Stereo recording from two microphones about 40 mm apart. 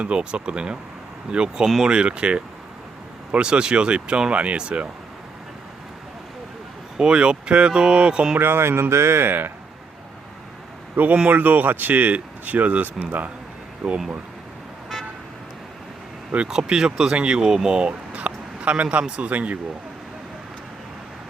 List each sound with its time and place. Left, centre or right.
0.0 s speech: right
6.9 s speech: right
8.4 s speech: right
10.9 s speech: right
16.5 s a man's voice: centre; by 19.5 s right